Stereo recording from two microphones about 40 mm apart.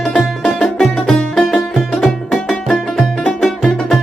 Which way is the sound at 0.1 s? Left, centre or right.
Left.